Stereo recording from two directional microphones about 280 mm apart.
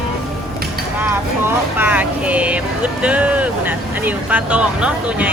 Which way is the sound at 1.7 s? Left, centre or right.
Centre.